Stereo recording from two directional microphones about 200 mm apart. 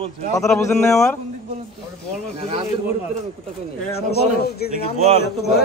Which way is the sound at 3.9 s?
50° left (ahead or behind).